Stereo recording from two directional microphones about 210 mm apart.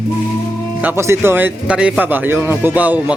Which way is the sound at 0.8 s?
10° right (ahead or behind).